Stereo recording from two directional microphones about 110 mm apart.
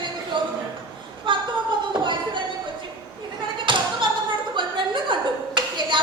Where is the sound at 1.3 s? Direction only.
50° right (ahead or behind).